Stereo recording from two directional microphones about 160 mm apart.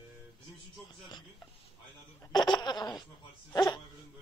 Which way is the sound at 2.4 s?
25° left (ahead or behind).